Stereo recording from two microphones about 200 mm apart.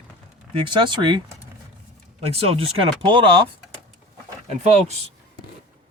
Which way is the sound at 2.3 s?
30° right (ahead or behind).